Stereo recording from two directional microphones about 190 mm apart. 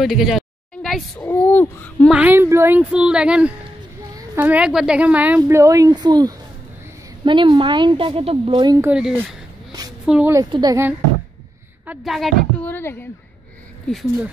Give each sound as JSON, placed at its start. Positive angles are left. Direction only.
{"t": 0.0, "sound": "speech", "side_deg": 0}
{"t": 2.0, "sound": "a woman's voice", "side_deg": -10}
{"t": 8.9, "sound": "a sound", "side_deg": -10}
{"t": 10.0, "sound": "a woman's voice", "side_deg": -5}
{"t": 10.3, "sound": "a woman's voice", "side_deg": -20}
{"t": 11.8, "sound": "speech", "side_deg": -5}
{"t": 12.7, "sound": "a woman's voice", "side_deg": 10}